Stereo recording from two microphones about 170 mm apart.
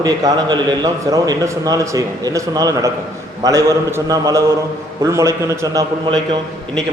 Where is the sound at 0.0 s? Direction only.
25° right (ahead or behind).